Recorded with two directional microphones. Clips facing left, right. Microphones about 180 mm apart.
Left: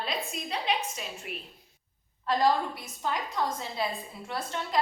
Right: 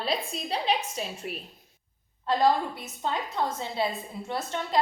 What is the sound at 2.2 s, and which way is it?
A woman's voice, 20° right (ahead or behind).